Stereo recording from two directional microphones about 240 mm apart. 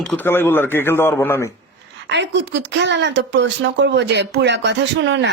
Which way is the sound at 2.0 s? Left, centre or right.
Right.